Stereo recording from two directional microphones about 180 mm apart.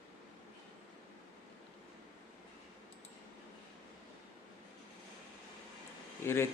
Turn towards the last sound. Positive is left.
turn(degrees=15)  # may be behind; listen again after turning